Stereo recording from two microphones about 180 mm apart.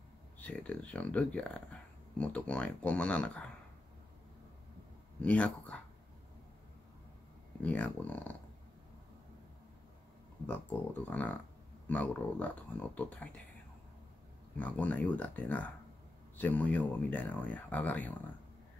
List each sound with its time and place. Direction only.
0.4 s speech: 5° left (ahead or behind)
5.2 s speech: 5° left (ahead or behind)
7.6 s speech: 10° left (ahead or behind)
10.4 s speech: 10° left (ahead or behind)
14.6 s speech: 10° left (ahead or behind)